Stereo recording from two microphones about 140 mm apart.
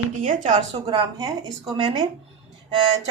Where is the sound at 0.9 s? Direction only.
30° right (ahead or behind).